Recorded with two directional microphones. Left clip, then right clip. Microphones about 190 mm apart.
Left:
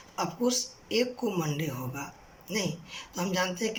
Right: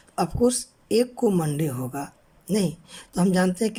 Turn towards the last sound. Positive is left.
turn(degrees=-50)  # may be behind; listen again after turning